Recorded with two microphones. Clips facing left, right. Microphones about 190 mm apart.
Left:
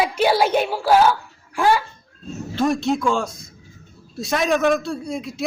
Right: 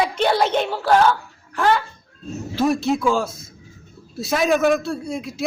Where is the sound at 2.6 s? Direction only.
Centre (ahead or behind).